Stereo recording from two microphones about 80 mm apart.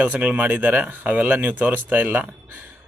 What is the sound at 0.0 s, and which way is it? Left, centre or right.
Speech, centre.